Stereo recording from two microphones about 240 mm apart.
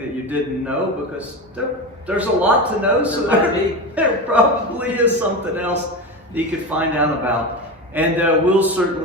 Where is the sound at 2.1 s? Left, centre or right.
Centre.